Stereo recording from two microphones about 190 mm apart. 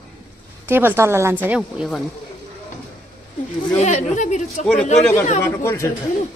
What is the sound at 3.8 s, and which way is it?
Speech, 35° left (ahead or behind).